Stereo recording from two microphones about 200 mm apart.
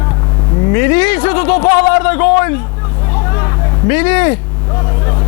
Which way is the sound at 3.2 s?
20° left (ahead or behind).